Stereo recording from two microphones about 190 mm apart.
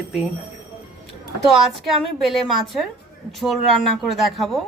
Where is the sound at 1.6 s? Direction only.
Centre (ahead or behind).